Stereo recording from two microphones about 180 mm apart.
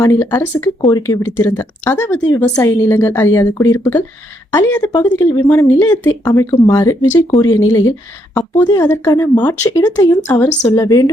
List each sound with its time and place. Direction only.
0.0 s speech: 15° left (ahead or behind)
4.9 s a woman's voice: 25° left (ahead or behind)
5.1 s a woman's voice: 15° left (ahead or behind)